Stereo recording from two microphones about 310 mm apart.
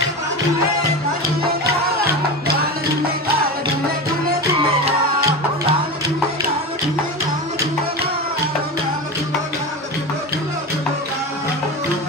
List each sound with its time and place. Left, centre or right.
4.8 s music: centre